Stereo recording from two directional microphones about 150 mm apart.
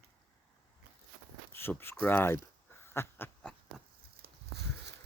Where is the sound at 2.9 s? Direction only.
15° left (ahead or behind).